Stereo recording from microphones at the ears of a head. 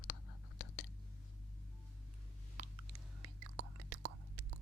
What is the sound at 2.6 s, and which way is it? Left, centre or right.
Whispering, right.